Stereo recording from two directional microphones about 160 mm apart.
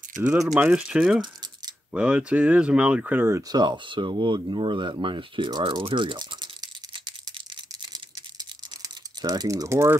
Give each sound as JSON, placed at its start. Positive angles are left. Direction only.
{"t": 0.5, "sound": "speech", "side_deg": -5}
{"t": 8.8, "sound": "speech", "side_deg": -25}